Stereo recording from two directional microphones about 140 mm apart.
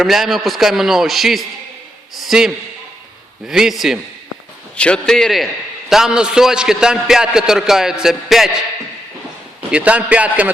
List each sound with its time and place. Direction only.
0.0 s a man's voice: centre (ahead or behind)
9.7 s a man's voice: 10° right (ahead or behind)